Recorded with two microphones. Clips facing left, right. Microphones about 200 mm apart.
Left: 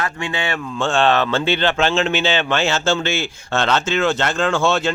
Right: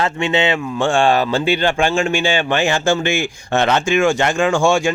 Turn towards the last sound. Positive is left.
turn(degrees=-15)  # may be behind; listen again after turning